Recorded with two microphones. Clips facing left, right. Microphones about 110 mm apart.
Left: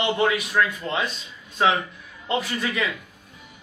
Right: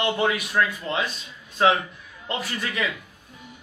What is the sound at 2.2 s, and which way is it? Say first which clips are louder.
Speech: left 4 dB; centre (ahead or behind).